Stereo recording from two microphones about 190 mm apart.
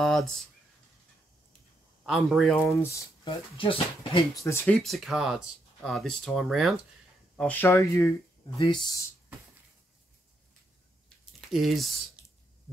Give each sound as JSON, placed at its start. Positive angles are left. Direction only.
{"t": 0.0, "sound": "speech", "side_deg": 0}
{"t": 2.0, "sound": "speech", "side_deg": 0}
{"t": 2.6, "sound": "speech", "side_deg": 10}
{"t": 3.3, "sound": "speech", "side_deg": 30}
{"t": 4.5, "sound": "speech", "side_deg": 5}
{"t": 11.5, "sound": "speech", "side_deg": 0}